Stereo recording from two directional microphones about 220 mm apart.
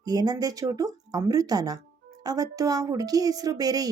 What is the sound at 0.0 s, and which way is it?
Speech, 15° right (ahead or behind).